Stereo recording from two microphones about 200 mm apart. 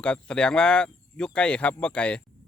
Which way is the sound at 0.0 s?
5° left (ahead or behind).